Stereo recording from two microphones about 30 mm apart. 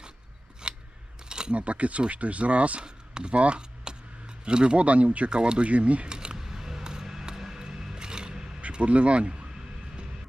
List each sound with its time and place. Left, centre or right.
0.6 s scissors: right
1.3 s cutlery: right
1.5 s speech: right
2.8 s a sound: right
4.4 s speech: right
4.8 s speech: right
5.3 s speech: right
5.6 s speech: right
6.1 s a sound: right
6.3 s a sound: centre
8.8 s speech: right